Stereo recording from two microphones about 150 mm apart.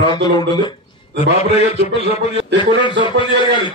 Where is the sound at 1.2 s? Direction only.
45° left (ahead or behind).